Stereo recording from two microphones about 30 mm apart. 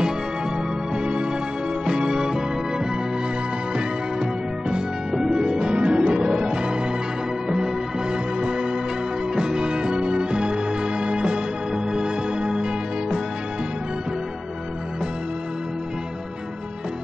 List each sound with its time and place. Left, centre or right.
0.9 s music: right
5.1 s music: centre